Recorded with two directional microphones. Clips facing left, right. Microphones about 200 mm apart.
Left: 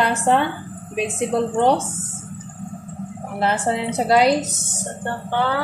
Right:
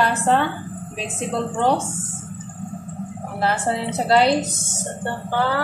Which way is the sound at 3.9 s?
15° left (ahead or behind).